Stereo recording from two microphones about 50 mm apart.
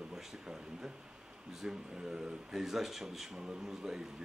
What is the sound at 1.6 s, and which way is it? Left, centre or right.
Speech, centre.